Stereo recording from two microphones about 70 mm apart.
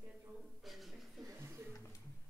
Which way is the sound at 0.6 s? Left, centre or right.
Centre.